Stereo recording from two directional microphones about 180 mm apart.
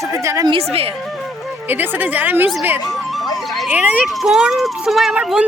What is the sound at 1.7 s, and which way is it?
A woman's voice, 10° right (ahead or behind).